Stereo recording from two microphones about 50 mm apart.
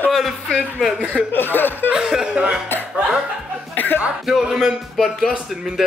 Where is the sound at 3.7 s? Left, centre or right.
Left.